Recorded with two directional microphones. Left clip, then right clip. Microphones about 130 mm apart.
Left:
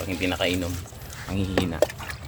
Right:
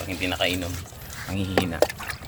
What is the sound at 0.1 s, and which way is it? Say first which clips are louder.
Speech: even; 40° left (ahead or behind).